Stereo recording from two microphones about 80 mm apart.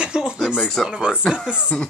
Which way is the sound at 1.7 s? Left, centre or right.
Centre.